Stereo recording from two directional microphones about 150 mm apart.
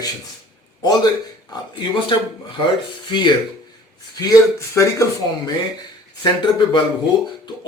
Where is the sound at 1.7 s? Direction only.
30° left (ahead or behind).